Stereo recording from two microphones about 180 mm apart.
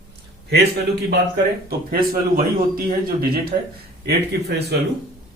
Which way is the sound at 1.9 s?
55° right (ahead or behind).